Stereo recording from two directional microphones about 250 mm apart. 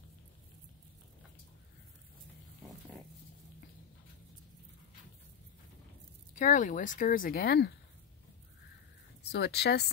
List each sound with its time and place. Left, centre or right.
6.3 s speech: left
9.3 s speech: left